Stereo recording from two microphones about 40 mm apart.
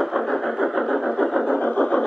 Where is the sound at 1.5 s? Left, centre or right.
Left.